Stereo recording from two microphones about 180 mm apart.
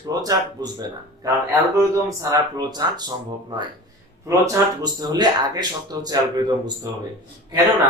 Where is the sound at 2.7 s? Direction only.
20° right (ahead or behind).